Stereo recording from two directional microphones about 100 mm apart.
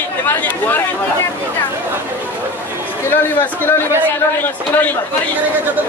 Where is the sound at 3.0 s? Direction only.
20° left (ahead or behind).